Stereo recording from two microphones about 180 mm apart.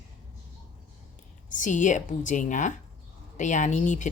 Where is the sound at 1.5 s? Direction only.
45° left (ahead or behind).